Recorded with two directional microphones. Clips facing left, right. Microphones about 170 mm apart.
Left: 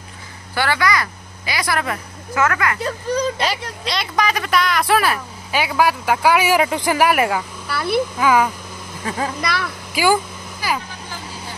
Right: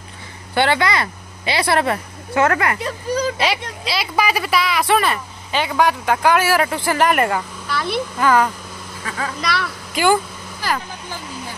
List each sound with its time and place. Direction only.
0.6 s a woman's voice: 25° right (ahead or behind)
3.3 s speech: 5° right (ahead or behind)
9.0 s speech: 30° left (ahead or behind)
9.4 s a sound: 5° left (ahead or behind)